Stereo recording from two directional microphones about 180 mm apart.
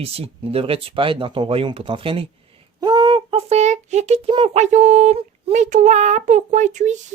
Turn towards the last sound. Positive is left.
turn(degrees=-40)  # may be behind; listen again after turning